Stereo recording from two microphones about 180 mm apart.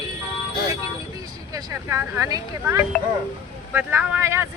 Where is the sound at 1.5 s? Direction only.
20° right (ahead or behind).